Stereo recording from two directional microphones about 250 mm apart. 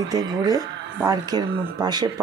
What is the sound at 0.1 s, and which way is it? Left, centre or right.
Speech, centre.